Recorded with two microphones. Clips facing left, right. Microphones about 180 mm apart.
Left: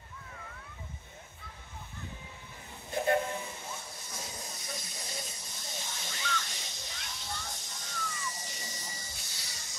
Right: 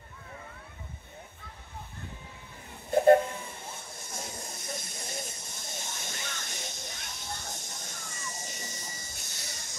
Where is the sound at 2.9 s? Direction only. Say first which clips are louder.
Right 9 dB; 55° right (ahead or behind).